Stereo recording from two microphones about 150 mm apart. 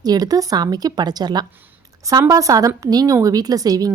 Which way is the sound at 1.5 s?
15° right (ahead or behind).